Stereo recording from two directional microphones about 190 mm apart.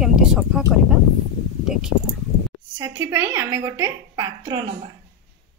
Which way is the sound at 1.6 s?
5° right (ahead or behind).